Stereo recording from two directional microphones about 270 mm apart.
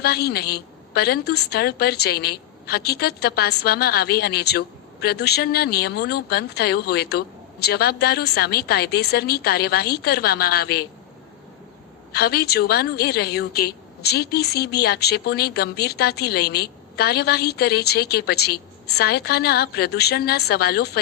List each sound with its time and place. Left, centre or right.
0.0 s a woman's voice: left
12.1 s a woman's voice: left